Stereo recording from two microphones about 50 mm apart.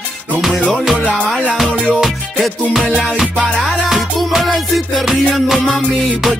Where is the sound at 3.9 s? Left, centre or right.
Centre.